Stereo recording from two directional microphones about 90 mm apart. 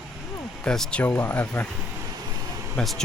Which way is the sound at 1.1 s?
25° left (ahead or behind).